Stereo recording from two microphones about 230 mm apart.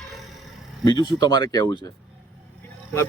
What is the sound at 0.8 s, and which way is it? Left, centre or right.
A man's voice, centre.